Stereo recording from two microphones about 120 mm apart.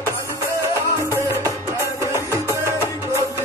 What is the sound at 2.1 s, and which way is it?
Music, 25° right (ahead or behind).